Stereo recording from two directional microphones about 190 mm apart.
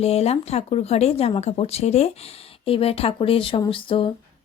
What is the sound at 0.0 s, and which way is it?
A woman's voice, 30° left (ahead or behind).